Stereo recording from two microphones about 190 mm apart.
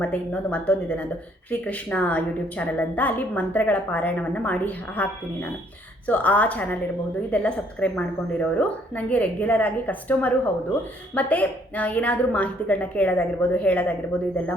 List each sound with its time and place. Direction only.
0.0 s a woman's voice: 5° left (ahead or behind)